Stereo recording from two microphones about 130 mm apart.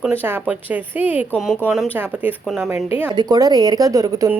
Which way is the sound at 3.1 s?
30° right (ahead or behind).